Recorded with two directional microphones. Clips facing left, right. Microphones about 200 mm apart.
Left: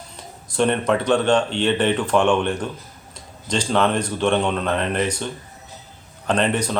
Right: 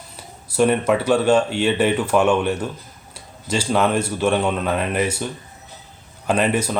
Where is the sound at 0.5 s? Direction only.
10° right (ahead or behind).